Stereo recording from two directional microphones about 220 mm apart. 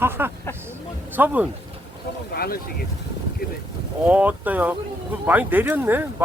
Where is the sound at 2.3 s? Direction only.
45° left (ahead or behind).